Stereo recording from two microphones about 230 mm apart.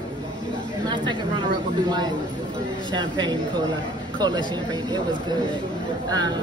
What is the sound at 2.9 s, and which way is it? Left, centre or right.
Speech, centre.